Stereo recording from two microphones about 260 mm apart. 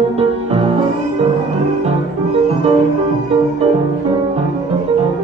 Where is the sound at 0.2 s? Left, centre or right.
Right.